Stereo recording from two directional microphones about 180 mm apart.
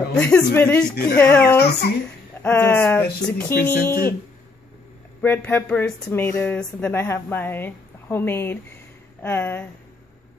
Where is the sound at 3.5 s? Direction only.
55° left (ahead or behind).